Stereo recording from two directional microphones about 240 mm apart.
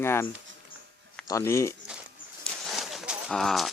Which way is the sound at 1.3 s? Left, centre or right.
Centre.